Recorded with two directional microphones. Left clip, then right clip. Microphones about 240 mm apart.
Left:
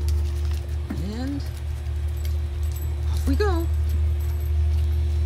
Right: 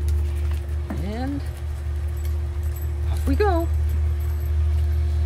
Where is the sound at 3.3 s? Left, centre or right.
Centre.